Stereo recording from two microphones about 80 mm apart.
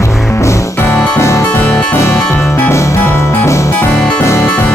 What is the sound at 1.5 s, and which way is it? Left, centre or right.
Music, left.